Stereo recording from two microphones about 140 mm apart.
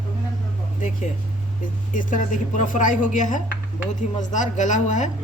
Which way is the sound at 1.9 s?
65° left (ahead or behind).